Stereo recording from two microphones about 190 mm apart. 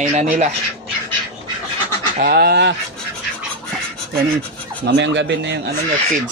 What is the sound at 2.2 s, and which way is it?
Speech, 55° right (ahead or behind).